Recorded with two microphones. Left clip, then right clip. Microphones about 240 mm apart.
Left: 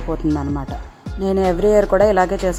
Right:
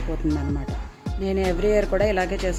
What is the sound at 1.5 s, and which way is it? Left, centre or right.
Speech, centre.